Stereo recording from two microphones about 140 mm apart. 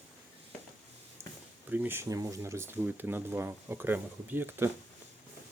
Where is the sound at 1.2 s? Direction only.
20° right (ahead or behind).